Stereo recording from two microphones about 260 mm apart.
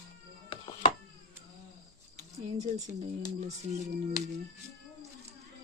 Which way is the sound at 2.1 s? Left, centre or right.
Right.